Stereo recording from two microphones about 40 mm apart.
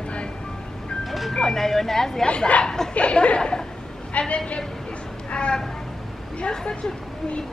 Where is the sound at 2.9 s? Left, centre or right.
Left.